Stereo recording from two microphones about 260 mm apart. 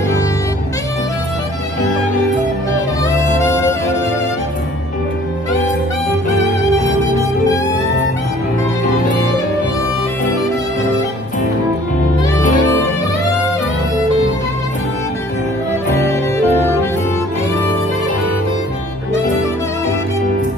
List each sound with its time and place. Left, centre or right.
3.0 s music: centre
16.1 s music: centre